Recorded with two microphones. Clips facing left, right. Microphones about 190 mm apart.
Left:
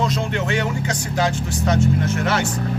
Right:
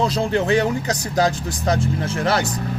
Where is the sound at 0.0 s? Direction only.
35° right (ahead or behind).